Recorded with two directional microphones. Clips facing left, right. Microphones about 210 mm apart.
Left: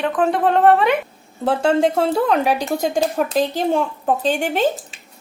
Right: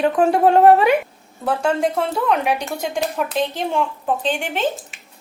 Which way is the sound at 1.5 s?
25° left (ahead or behind).